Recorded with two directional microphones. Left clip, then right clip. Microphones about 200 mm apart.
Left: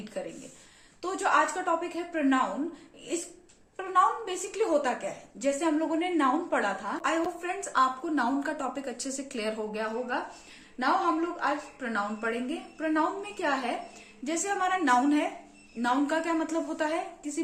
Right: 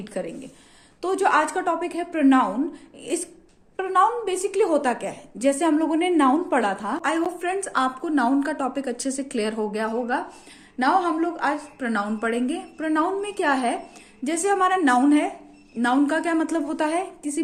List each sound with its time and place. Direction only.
0.1 s a woman's voice: 45° right (ahead or behind)
3.8 s a woman's voice: 45° right (ahead or behind)